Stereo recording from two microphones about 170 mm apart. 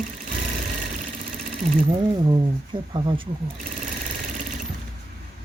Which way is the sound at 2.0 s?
25° right (ahead or behind).